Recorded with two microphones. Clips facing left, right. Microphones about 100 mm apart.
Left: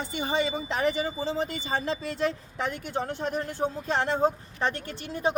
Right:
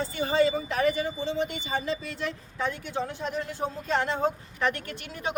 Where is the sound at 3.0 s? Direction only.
45° left (ahead or behind).